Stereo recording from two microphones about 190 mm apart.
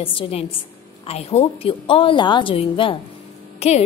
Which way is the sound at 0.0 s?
30° left (ahead or behind).